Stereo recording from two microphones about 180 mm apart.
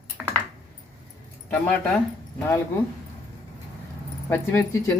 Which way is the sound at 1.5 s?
5° left (ahead or behind).